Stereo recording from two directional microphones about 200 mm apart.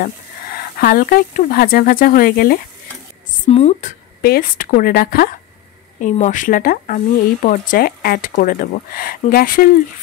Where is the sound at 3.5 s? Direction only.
30° left (ahead or behind).